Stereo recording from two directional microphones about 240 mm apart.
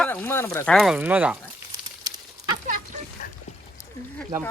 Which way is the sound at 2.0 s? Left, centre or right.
Centre.